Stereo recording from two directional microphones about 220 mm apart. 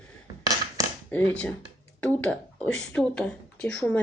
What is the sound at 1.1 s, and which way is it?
Speech, 5° left (ahead or behind).